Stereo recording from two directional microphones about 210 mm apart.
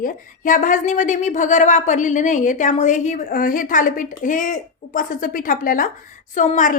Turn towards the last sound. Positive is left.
turn(degrees=35)  # may be behind; listen again after turning